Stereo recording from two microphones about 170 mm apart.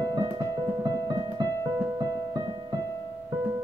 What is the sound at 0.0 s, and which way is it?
Music, 25° right (ahead or behind).